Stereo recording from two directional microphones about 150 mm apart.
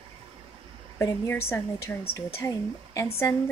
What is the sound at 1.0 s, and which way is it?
Speech, 15° left (ahead or behind).